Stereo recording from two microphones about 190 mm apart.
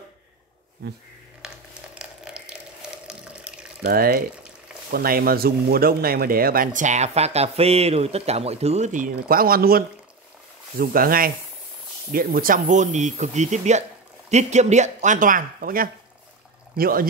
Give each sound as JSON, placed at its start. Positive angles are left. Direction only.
{"t": 2.0, "sound": "ratchet", "side_deg": -5}
{"t": 3.8, "sound": "speech", "side_deg": -50}